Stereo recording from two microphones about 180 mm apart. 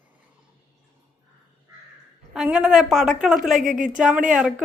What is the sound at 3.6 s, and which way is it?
Speech, 45° right (ahead or behind).